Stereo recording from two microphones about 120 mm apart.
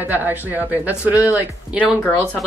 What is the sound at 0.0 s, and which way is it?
Speech, 15° right (ahead or behind).